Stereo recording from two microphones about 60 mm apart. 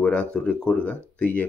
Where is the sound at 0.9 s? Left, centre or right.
Left.